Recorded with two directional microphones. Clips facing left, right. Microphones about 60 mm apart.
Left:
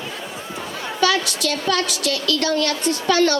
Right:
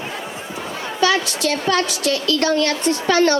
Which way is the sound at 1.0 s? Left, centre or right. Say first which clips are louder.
Right 1 dB; right.